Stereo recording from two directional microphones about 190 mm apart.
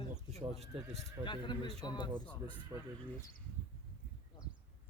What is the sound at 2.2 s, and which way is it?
Speech, 5° left (ahead or behind).